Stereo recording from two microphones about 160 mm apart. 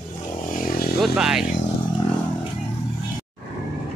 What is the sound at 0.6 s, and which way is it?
Vehicle, 70° left (ahead or behind).